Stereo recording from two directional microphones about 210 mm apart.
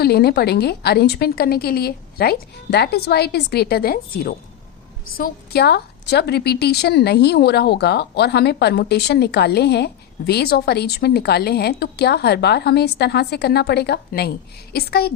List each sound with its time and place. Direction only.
0.0 s a woman's voice: 50° left (ahead or behind)